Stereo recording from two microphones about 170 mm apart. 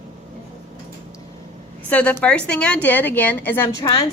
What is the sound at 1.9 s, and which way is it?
A woman's voice, 10° left (ahead or behind).